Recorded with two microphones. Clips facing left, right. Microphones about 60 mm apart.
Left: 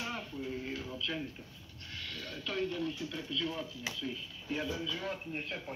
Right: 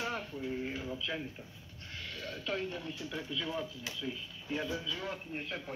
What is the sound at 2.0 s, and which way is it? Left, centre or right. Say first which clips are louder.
Speech: right 1 dB; right.